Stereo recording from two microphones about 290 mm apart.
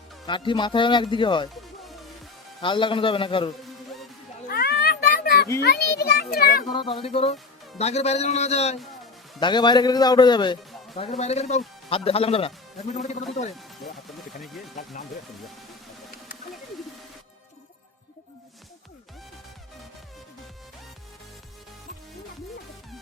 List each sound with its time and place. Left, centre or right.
0.3 s a man's voice: centre
2.6 s a man's voice: centre
4.4 s children playing: left
5.5 s a child's voice: left
6.7 s a man's voice: centre